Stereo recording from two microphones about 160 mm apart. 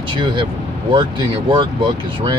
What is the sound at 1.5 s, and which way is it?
Speech, 30° right (ahead or behind).